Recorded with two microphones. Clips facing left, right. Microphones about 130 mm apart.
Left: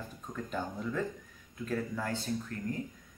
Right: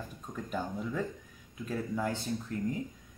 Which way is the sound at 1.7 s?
20° right (ahead or behind).